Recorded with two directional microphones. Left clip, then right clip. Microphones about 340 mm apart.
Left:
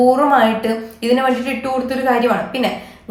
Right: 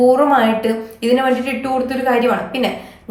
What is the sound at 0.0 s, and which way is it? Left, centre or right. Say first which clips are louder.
A woman's voice: even; centre.